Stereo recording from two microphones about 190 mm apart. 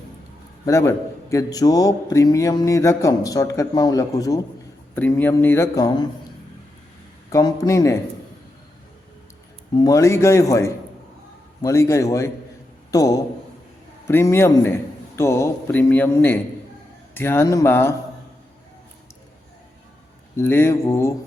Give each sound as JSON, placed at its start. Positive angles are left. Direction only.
{"t": 0.6, "sound": "a man's voice", "side_deg": 15}
{"t": 7.3, "sound": "a man's voice", "side_deg": 20}
{"t": 9.7, "sound": "a man's voice", "side_deg": 20}
{"t": 20.3, "sound": "a man's voice", "side_deg": 10}